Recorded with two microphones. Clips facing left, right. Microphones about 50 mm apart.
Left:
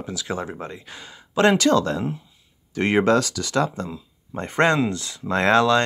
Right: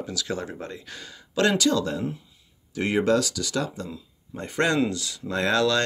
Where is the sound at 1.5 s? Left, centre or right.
Left.